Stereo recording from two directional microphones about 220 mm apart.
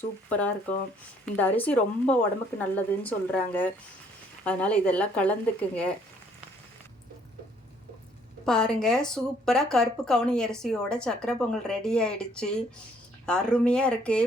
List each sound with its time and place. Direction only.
0.3 s speech: 5° left (ahead or behind)
8.4 s speech: 5° left (ahead or behind)